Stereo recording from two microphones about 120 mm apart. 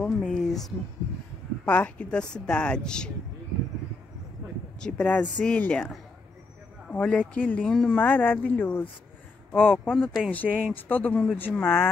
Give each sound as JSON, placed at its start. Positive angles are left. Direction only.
{"t": 0.0, "sound": "a sound", "side_deg": 5}
{"t": 1.7, "sound": "speech", "side_deg": 10}
{"t": 4.7, "sound": "speech", "side_deg": 10}